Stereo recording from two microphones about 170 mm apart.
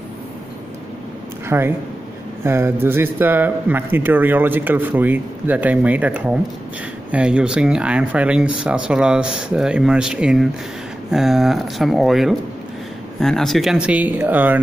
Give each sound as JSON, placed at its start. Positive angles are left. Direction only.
{"t": 1.5, "sound": "speech", "side_deg": -15}